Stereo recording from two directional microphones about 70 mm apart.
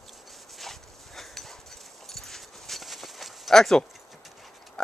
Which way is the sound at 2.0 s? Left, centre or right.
Centre.